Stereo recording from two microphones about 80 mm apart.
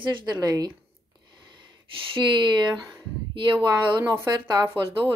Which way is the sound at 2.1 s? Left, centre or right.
Right.